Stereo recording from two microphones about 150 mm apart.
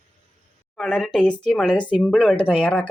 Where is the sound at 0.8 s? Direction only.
5° left (ahead or behind).